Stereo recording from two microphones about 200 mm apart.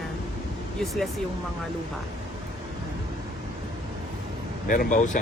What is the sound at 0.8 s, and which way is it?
Speech, centre (ahead or behind).